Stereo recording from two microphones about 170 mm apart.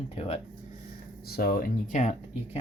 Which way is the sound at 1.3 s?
65° left (ahead or behind).